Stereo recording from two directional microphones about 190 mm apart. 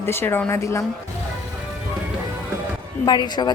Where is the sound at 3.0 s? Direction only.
25° left (ahead or behind).